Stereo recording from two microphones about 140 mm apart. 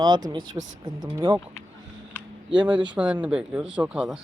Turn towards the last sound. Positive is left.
turn(degrees=-10)  # may be behind; listen again after turning